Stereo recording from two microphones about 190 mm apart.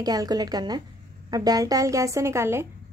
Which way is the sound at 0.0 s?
20° right (ahead or behind).